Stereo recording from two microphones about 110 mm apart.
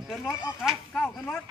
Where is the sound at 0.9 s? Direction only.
10° left (ahead or behind).